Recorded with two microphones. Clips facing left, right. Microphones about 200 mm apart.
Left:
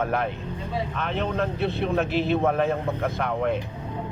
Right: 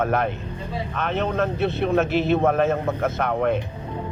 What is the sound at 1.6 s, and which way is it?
Speech, 70° right (ahead or behind).